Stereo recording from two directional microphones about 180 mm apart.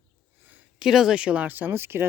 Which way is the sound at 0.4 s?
5° right (ahead or behind).